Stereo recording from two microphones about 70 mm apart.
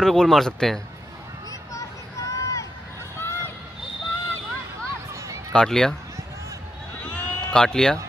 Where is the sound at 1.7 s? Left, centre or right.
Left.